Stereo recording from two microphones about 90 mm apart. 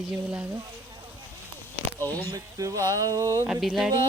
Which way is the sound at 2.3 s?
35° right (ahead or behind).